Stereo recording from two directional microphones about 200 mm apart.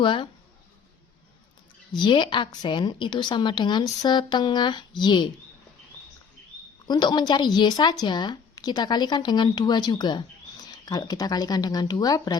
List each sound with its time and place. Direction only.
0.0 s a woman's voice: 25° left (ahead or behind)
2.0 s a woman's voice: 25° left (ahead or behind)
6.8 s a woman's voice: 20° left (ahead or behind)